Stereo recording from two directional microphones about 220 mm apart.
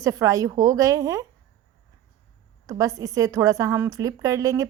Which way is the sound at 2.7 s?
15° right (ahead or behind).